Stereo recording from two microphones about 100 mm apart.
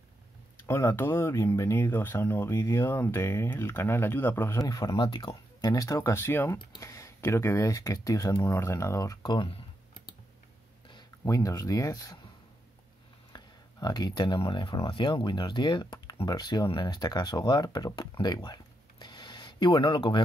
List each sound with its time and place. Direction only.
0.6 s speech: 30° left (ahead or behind)
4.6 s speech: 35° left (ahead or behind)
4.9 s speech: 50° left (ahead or behind); by 9.3 s 35° left (ahead or behind)
9.3 s computer keyboard: 60° left (ahead or behind)
11.2 s speech: 35° left (ahead or behind)
13.3 s speech: 40° left (ahead or behind)
18.2 s a sound: 45° left (ahead or behind)